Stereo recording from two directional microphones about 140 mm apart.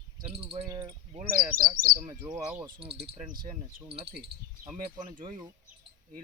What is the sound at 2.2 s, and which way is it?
Speech, 25° right (ahead or behind).